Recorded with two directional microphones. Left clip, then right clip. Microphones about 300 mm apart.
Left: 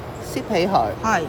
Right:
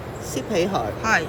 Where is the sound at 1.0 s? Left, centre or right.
Centre.